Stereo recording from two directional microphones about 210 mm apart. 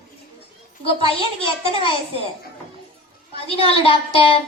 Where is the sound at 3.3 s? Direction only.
25° left (ahead or behind).